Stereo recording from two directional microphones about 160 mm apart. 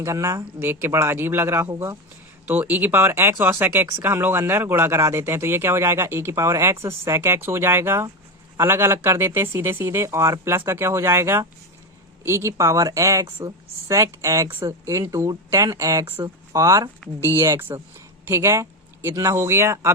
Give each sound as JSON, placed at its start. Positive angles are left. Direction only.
{"t": 0.0, "sound": "speech", "side_deg": -20}